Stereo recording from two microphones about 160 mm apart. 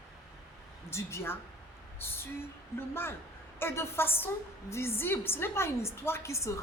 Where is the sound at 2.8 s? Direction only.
15° left (ahead or behind).